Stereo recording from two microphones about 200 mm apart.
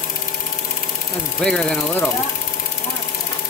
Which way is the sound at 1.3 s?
5° left (ahead or behind).